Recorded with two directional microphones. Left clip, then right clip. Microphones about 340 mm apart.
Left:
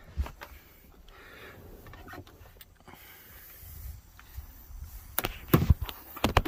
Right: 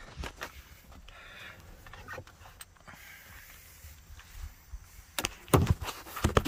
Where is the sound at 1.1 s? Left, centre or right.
Centre.